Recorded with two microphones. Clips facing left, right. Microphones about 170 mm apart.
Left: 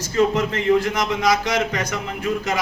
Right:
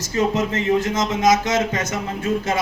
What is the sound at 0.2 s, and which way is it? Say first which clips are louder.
Speech: left 1 dB; 20° right (ahead or behind).